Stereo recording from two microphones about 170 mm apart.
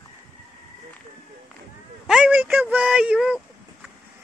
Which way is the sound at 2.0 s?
Centre (ahead or behind).